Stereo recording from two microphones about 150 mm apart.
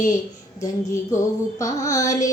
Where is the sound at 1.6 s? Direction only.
20° left (ahead or behind).